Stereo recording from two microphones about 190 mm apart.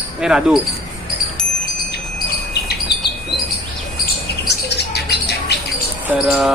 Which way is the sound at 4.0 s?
60° left (ahead or behind).